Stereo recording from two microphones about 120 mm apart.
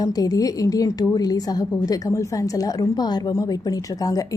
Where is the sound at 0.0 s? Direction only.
30° left (ahead or behind).